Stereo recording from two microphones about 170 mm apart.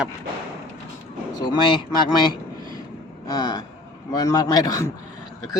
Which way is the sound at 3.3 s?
25° left (ahead or behind).